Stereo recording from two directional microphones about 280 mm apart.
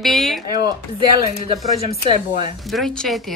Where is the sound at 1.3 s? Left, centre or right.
Left.